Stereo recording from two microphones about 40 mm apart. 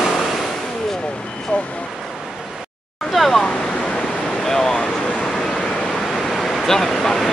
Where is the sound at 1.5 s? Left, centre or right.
Left.